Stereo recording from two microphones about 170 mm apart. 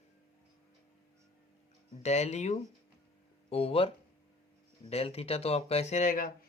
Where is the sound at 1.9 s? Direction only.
40° left (ahead or behind).